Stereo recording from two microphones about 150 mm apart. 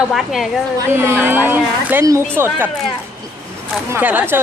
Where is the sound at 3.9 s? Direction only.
10° right (ahead or behind).